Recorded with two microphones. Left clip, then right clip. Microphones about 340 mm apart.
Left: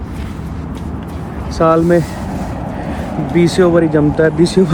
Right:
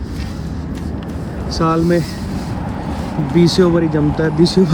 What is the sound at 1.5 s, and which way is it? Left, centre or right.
Speech, centre.